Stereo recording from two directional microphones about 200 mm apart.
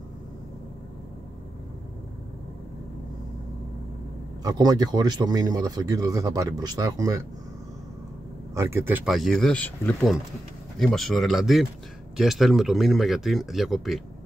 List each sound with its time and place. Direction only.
4.4 s speech: 20° right (ahead or behind)
8.5 s speech: 15° right (ahead or behind)